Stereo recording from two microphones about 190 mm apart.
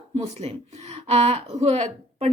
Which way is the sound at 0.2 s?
35° right (ahead or behind).